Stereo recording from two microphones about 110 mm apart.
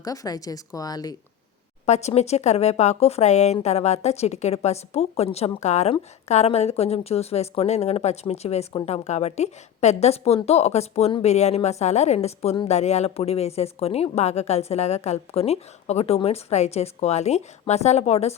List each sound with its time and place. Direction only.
0.0 s a woman's voice: 35° left (ahead or behind)
1.9 s a woman's voice: 80° left
11.2 s a woman's voice: 85° left
12.6 s a woman's voice: 85° left